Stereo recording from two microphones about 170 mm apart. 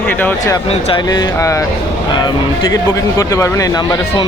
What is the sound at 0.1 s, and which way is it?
Speech, 10° left (ahead or behind).